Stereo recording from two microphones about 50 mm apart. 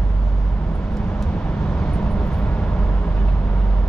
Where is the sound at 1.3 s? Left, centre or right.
Left.